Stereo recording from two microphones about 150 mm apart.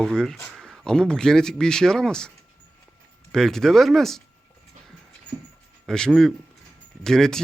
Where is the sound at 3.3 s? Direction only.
5° left (ahead or behind).